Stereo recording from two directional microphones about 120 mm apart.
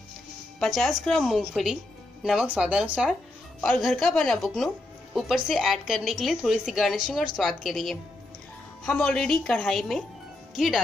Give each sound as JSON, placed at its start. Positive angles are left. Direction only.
{"t": 0.6, "sound": "a woman's voice", "side_deg": 0}
{"t": 3.6, "sound": "a woman's voice", "side_deg": 5}